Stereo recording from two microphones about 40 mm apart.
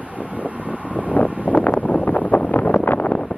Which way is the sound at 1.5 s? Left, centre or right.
Left.